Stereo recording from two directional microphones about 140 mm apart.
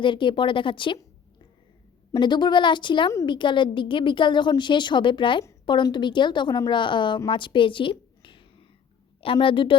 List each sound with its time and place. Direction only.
0.0 s a woman's voice: 35° left (ahead or behind)
2.1 s a woman's voice: 30° left (ahead or behind)
7.3 s a sound: 35° left (ahead or behind)
9.2 s a woman's voice: 40° left (ahead or behind)